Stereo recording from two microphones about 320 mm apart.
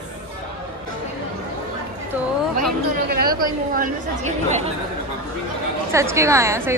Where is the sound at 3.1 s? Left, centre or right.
Right.